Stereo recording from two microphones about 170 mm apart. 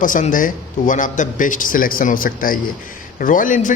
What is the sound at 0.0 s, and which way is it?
A man's voice, 50° left (ahead or behind).